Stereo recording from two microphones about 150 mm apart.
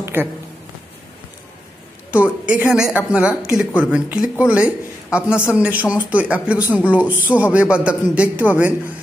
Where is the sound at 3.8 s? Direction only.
10° right (ahead or behind).